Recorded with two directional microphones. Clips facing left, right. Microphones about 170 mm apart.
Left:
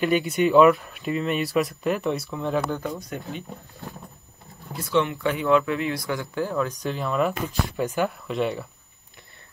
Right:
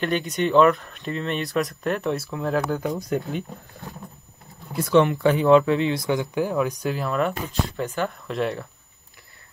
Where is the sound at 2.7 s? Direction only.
15° right (ahead or behind).